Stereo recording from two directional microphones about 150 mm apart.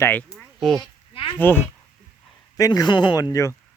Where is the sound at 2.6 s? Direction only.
25° left (ahead or behind).